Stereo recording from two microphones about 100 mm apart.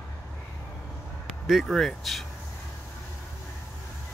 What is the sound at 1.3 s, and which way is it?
Speech, 5° right (ahead or behind).